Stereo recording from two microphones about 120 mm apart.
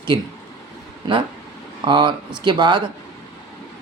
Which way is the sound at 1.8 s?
40° right (ahead or behind).